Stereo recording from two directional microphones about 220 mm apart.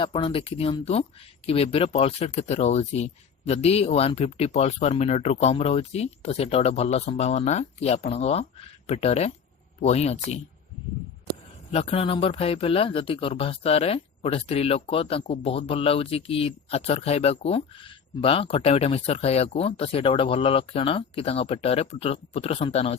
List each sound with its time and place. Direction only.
0.0 s speech: 25° left (ahead or behind)
11.7 s speech: 25° left (ahead or behind)